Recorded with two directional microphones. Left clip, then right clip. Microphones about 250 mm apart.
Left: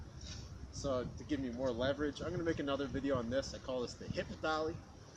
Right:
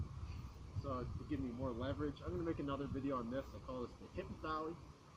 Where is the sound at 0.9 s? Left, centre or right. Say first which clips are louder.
Left 7 dB; centre.